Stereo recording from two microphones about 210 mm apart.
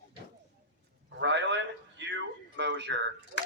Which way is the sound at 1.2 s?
55° right (ahead or behind).